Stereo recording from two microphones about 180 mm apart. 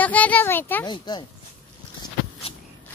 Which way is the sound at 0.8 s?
25° left (ahead or behind).